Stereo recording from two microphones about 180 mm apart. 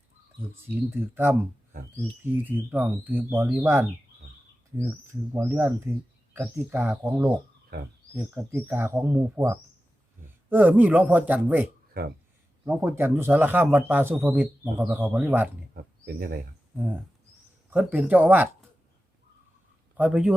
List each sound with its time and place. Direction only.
0.7 s a man's voice: 10° right (ahead or behind)
5.3 s a man's voice: 15° right (ahead or behind)
12.0 s speech: 55° right (ahead or behind)
12.6 s a man's voice: 10° right (ahead or behind)
15.7 s a sound: 60° right (ahead or behind)
17.7 s a man's voice: 10° right (ahead or behind)
20.0 s a man's voice: 5° right (ahead or behind)